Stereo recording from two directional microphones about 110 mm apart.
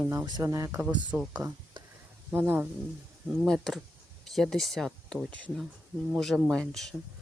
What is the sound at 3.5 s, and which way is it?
Speech, 5° left (ahead or behind).